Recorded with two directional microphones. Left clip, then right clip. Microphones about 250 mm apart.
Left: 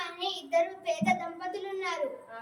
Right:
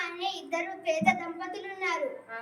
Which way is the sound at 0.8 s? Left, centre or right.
Centre.